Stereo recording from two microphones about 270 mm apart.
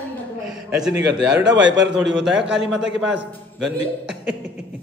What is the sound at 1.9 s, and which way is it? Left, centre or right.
Mantra, centre.